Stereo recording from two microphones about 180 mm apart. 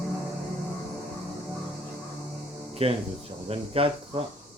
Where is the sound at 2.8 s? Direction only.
35° right (ahead or behind).